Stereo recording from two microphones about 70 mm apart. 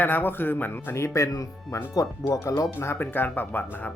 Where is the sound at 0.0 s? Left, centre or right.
Left.